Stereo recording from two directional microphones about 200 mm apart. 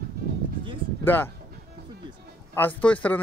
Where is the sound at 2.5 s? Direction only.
10° left (ahead or behind).